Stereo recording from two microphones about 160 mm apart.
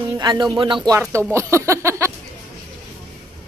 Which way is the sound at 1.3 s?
15° right (ahead or behind).